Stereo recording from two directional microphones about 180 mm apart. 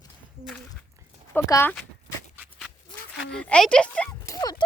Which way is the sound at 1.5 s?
15° left (ahead or behind).